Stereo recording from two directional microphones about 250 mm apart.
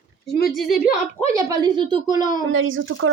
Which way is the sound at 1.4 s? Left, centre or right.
Centre.